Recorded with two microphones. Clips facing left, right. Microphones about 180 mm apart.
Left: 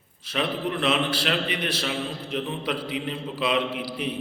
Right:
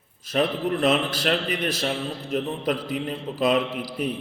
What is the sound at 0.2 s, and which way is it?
A man's voice, 45° right (ahead or behind).